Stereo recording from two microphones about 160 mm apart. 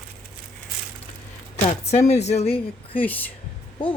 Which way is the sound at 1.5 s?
40° left (ahead or behind).